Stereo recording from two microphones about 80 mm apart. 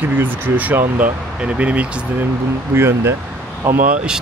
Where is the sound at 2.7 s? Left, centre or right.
Right.